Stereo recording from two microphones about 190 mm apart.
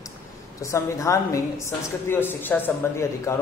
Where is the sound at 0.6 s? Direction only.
15° left (ahead or behind).